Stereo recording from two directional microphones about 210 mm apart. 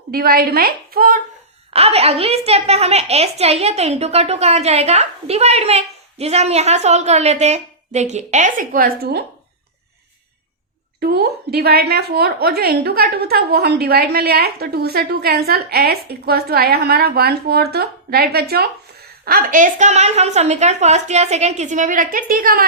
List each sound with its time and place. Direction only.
0.1 s a woman's voice: 45° right (ahead or behind)
1.7 s a woman's voice: 30° right (ahead or behind); by 9.2 s 45° right (ahead or behind)
11.0 s a woman's voice: 50° right (ahead or behind)